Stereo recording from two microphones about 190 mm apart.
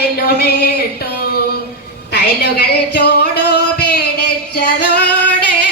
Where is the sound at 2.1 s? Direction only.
55° left (ahead or behind).